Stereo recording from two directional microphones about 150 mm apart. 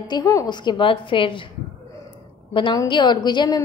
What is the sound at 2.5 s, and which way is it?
A woman's voice, 35° left (ahead or behind).